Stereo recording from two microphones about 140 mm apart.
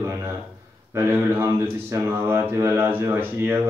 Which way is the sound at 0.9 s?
15° right (ahead or behind).